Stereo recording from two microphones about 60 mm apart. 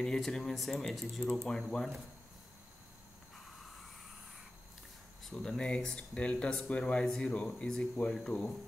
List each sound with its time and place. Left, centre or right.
0.0 s speech: centre
5.3 s speech: centre